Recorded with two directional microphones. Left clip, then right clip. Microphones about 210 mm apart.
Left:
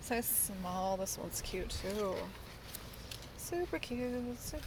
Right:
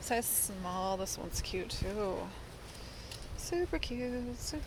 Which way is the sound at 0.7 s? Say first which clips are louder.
Right 1 dB; 5° left (ahead or behind).